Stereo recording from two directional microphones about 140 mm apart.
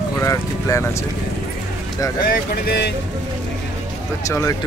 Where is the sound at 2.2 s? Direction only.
90° left.